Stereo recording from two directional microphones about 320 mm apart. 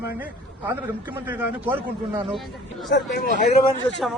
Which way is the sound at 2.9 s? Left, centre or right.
Left.